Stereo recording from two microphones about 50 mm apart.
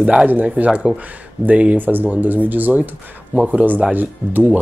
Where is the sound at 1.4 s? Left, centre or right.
Right.